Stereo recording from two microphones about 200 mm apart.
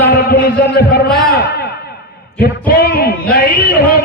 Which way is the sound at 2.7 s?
50° left (ahead or behind).